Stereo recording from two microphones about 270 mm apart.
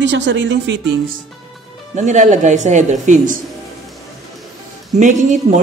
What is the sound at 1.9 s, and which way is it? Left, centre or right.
Speech, right.